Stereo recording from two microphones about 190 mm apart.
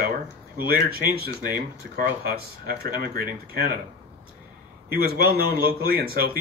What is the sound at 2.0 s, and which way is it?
Speech, 50° right (ahead or behind).